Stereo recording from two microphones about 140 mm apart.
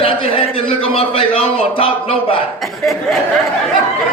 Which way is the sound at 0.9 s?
40° left (ahead or behind).